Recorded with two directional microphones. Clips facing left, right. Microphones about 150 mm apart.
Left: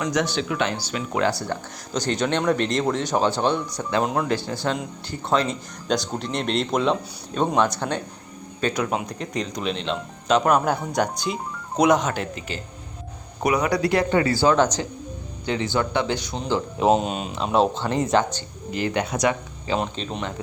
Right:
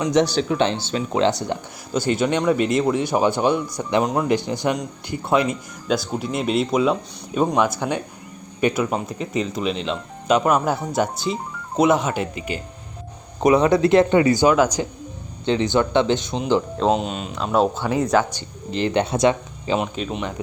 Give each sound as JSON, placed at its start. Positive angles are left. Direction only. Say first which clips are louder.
{"t": 0.1, "sound": "speech", "louder": "right 5 dB", "side_deg": -35}
{"t": 1.9, "sound": "speech", "louder": "right 3 dB", "side_deg": -10}
{"t": 4.0, "sound": "speech", "louder": "right 2 dB", "side_deg": 0}
{"t": 4.3, "sound": "speech", "louder": "right 4 dB", "side_deg": -15}
{"t": 13.4, "sound": "speech", "louder": "right 6 dB", "side_deg": -25}
{"t": 14.5, "sound": "speech", "louder": "right 2 dB", "side_deg": -5}
{"t": 15.4, "sound": "speech", "louder": "right 5 dB", "side_deg": -20}
{"t": 16.7, "sound": "speech", "louder": "left 1 dB", "side_deg": 15}
{"t": 17.4, "sound": "speech", "louder": "right 1 dB", "side_deg": 0}
{"t": 18.3, "sound": "speech", "louder": "right 3 dB", "side_deg": -25}
{"t": 19.8, "sound": "speech", "louder": "right 2 dB", "side_deg": -5}